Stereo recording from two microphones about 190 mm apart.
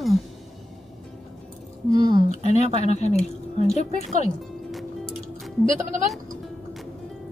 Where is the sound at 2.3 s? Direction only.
35° left (ahead or behind).